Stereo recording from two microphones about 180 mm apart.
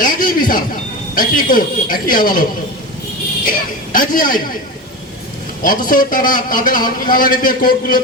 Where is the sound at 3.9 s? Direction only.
50° left (ahead or behind).